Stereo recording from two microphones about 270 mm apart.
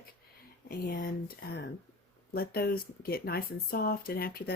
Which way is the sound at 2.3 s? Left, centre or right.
Left.